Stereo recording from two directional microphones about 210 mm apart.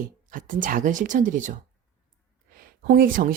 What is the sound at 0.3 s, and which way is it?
A woman's voice, 40° right (ahead or behind).